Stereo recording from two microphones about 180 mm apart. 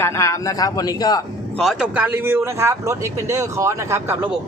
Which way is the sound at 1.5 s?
Centre (ahead or behind).